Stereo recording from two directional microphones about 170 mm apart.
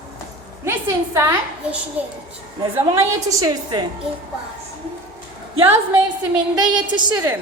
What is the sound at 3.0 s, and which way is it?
Speech, 20° right (ahead or behind).